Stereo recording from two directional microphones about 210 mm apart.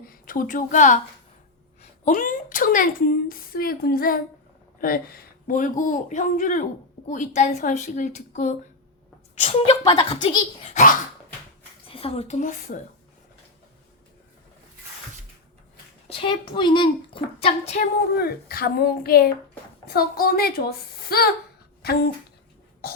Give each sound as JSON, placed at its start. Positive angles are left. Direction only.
{"t": 0.0, "sound": "a woman's voice", "side_deg": 40}
{"t": 16.0, "sound": "a child's voice", "side_deg": 25}
{"t": 18.2, "sound": "speech", "side_deg": 50}
{"t": 22.8, "sound": "beatboxing", "side_deg": 45}